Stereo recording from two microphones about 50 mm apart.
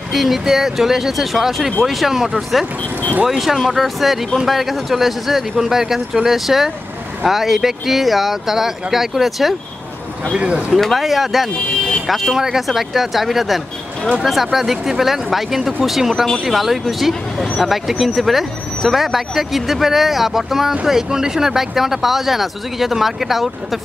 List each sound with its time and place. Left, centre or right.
0.1 s speech: centre
2.8 s speech: left
3.3 s speech: centre
10.3 s speech: right
10.7 s speech: centre